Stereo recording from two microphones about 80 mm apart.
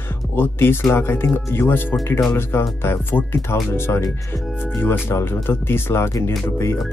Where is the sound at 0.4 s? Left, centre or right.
Left.